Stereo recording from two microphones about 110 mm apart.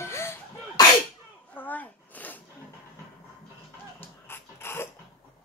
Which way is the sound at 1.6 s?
15° left (ahead or behind).